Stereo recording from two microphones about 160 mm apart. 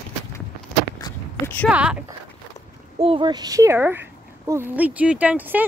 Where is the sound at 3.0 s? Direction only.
35° right (ahead or behind); by 5.6 s 10° right (ahead or behind).